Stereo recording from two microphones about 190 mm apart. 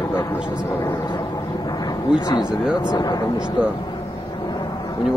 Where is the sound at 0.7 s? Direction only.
15° left (ahead or behind).